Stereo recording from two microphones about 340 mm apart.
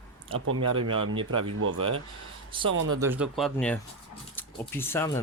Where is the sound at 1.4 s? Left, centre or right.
Right.